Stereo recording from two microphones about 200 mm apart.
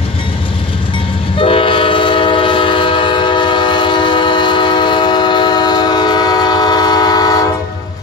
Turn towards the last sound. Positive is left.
turn(degrees=20)  # may be behind; listen again after turning